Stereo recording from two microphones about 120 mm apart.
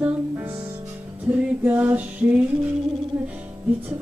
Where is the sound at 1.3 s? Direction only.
10° right (ahead or behind).